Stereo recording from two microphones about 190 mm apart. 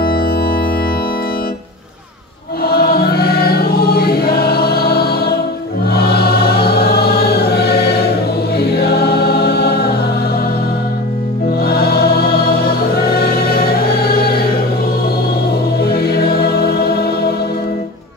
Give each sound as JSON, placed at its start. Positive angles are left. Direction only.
{"t": 0.0, "sound": "organ", "side_deg": 50}
{"t": 2.6, "sound": "choir", "side_deg": 55}
{"t": 8.5, "sound": "music", "side_deg": 55}
{"t": 11.6, "sound": "music", "side_deg": 55}
{"t": 15.8, "sound": "music", "side_deg": 55}